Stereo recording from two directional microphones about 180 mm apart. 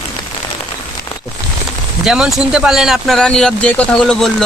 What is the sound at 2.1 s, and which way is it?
Speech, 5° right (ahead or behind).